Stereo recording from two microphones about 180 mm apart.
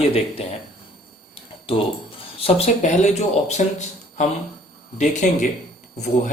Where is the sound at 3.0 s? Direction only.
40° left (ahead or behind).